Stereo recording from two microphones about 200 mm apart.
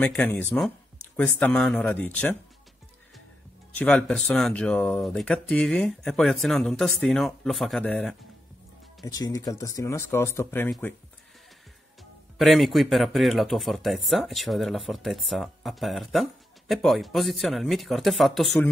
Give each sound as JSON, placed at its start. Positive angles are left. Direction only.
{"t": 0.0, "sound": "speech", "side_deg": 5}
{"t": 3.7, "sound": "speech", "side_deg": 5}
{"t": 9.0, "sound": "speech", "side_deg": 20}
{"t": 12.4, "sound": "speech", "side_deg": 0}